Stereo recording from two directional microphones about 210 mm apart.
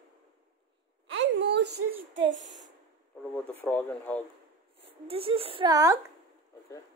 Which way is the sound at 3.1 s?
5° left (ahead or behind).